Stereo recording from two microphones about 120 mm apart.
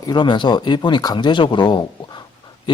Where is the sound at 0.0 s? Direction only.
40° left (ahead or behind).